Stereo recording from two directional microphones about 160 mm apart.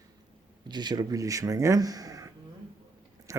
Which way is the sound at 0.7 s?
25° right (ahead or behind).